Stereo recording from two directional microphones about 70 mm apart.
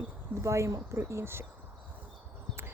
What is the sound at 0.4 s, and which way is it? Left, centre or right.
Speech, right.